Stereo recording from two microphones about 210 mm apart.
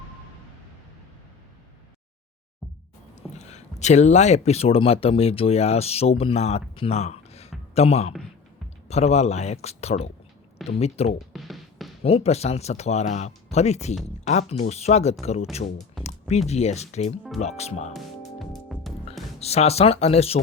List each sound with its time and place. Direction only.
3.2 s speech: 30° left (ahead or behind)
11.3 s music: centre (ahead or behind)
12.0 s speech: 30° left (ahead or behind)
16.0 s music: 30° left (ahead or behind)
16.5 s speech: 30° left (ahead or behind)
18.3 s music: centre (ahead or behind)
19.4 s speech: 30° left (ahead or behind)